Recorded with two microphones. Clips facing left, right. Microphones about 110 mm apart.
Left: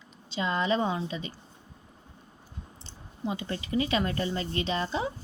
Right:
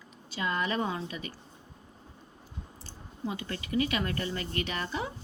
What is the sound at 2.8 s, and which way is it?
Speech, 25° left (ahead or behind).